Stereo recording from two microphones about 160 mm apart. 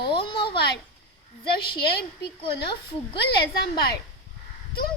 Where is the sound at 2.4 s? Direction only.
30° left (ahead or behind).